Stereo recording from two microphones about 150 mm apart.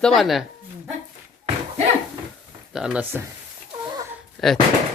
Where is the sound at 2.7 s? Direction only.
5° right (ahead or behind).